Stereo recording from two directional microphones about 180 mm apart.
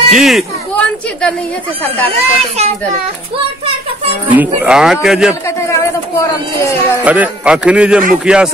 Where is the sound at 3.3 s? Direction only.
30° right (ahead or behind).